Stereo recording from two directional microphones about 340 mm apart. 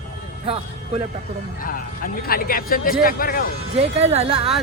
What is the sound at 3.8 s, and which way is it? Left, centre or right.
Speech, centre.